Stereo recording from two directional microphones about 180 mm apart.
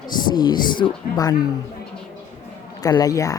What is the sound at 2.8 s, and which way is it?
Speech, 20° left (ahead or behind).